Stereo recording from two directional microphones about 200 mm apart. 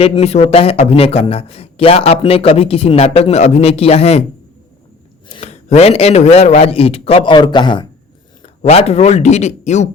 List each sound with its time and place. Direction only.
0.0 s a man's voice: 30° left (ahead or behind)
5.3 s a man's voice: 30° left (ahead or behind)